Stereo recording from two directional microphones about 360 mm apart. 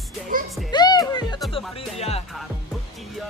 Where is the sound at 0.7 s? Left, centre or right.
Centre.